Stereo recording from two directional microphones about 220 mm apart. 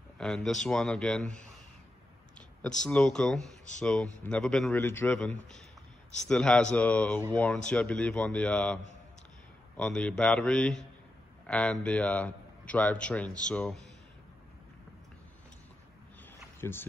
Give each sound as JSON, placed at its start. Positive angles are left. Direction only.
{"t": 0.2, "sound": "a man's voice", "side_deg": 0}
{"t": 2.8, "sound": "a man's voice", "side_deg": 5}
{"t": 9.8, "sound": "a man's voice", "side_deg": 5}
{"t": 16.6, "sound": "speech", "side_deg": 10}